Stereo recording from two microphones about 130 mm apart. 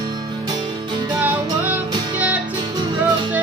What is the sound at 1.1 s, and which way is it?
Music, 15° right (ahead or behind).